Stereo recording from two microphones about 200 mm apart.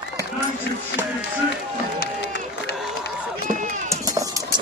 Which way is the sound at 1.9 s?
55° left (ahead or behind).